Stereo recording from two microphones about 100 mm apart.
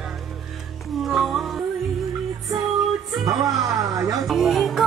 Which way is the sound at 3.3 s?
35° right (ahead or behind).